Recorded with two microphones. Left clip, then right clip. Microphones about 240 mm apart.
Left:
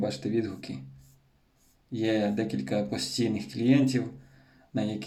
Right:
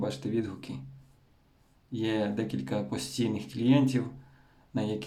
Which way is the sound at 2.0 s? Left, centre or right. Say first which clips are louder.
Left 3 dB; right.